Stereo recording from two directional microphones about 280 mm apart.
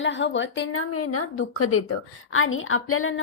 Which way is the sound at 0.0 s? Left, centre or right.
Left.